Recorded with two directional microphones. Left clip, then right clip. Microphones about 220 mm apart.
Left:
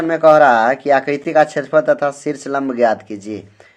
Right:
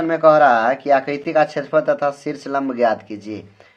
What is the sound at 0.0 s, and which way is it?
Speech, 20° left (ahead or behind).